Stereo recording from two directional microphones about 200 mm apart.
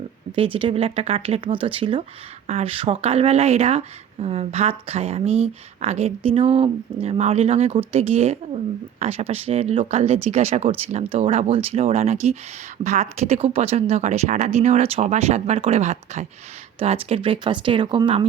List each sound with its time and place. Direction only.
0.3 s speech: 25° right (ahead or behind)